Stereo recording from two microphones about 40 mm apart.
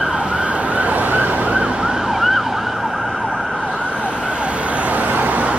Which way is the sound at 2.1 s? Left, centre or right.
Centre.